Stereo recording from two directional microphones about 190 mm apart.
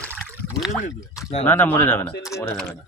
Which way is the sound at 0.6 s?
Centre (ahead or behind).